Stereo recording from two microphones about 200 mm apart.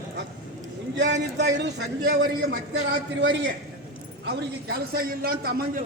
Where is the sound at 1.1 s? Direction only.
60° right (ahead or behind).